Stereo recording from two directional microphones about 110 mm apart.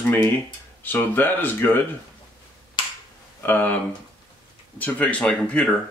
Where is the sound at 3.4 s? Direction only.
15° left (ahead or behind).